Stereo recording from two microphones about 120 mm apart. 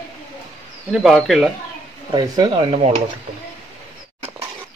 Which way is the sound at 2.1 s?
35° right (ahead or behind).